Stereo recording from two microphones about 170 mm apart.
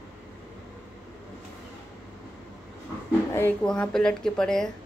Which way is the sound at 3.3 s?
10° left (ahead or behind).